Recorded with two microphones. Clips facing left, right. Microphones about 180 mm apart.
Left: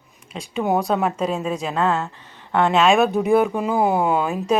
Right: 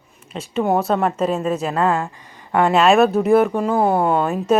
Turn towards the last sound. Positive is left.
turn(degrees=0)  # may be behind; listen again after turning